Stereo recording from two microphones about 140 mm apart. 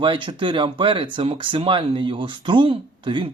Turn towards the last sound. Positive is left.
turn(degrees=-35)  # may be behind; listen again after turning